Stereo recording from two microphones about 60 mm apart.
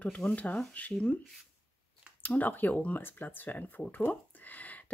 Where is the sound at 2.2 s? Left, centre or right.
Left.